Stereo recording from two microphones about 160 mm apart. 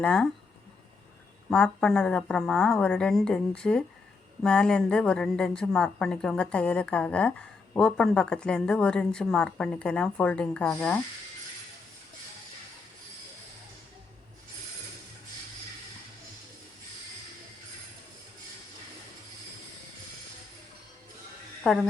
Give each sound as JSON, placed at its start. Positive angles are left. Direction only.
{"t": 0.0, "sound": "a woman's voice", "side_deg": 5}
{"t": 1.5, "sound": "a woman's voice", "side_deg": 5}
{"t": 21.6, "sound": "speech", "side_deg": 0}